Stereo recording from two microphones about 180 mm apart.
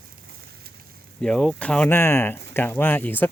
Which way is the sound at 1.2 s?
5° left (ahead or behind).